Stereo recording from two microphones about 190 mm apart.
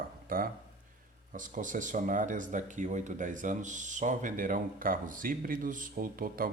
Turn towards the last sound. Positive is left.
turn(degrees=-50)  # may be behind; listen again after turning